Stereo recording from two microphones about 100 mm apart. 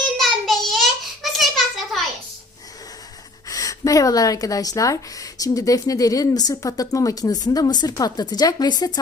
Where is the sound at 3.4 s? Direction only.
35° left (ahead or behind).